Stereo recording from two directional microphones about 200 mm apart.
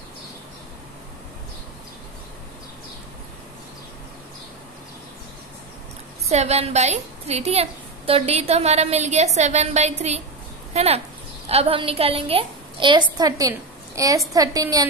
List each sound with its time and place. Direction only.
6.2 s a woman's voice: 30° right (ahead or behind)